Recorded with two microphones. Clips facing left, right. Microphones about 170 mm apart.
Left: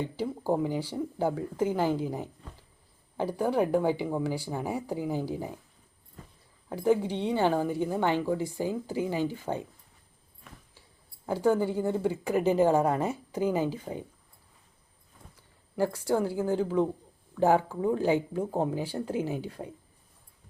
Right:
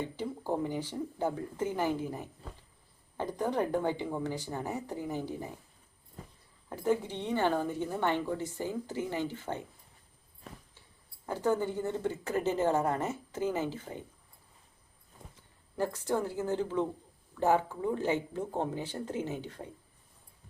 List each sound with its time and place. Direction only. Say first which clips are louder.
0.0 s a woman's voice: left 4 dB; 10° left (ahead or behind)
6.7 s a woman's voice: left 5 dB; 10° left (ahead or behind)
11.3 s a woman's voice: left 5 dB; 10° left (ahead or behind)
15.7 s a woman's voice: left 4 dB; 10° left (ahead or behind)